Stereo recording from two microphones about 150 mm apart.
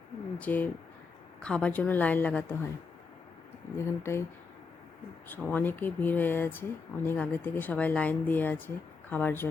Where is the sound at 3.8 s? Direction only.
15° left (ahead or behind).